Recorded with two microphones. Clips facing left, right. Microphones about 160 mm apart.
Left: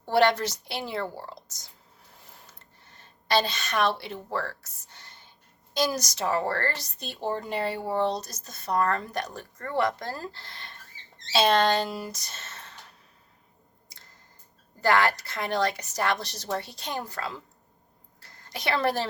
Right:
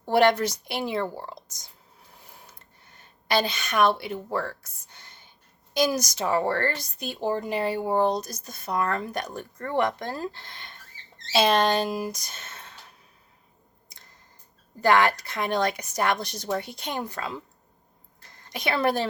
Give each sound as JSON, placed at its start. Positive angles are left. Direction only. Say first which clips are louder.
{"t": 0.0, "sound": "a woman's voice", "louder": "right 2 dB", "side_deg": -15}
{"t": 3.2, "sound": "a woman's voice", "louder": "even", "side_deg": -10}
{"t": 5.7, "sound": "a woman's voice", "louder": "right 3 dB", "side_deg": -10}
{"t": 14.8, "sound": "a woman's voice", "louder": "right 3 dB", "side_deg": -20}
{"t": 18.2, "sound": "a sound", "louder": "right 3 dB", "side_deg": -15}